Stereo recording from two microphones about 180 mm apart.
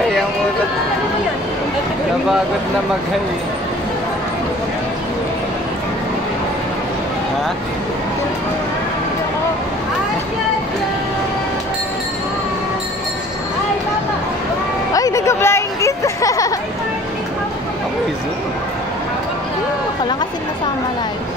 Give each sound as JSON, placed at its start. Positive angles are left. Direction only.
{"t": 15.0, "sound": "speech", "side_deg": 20}